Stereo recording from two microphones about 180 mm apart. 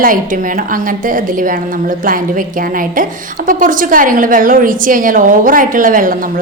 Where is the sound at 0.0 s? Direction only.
50° right (ahead or behind).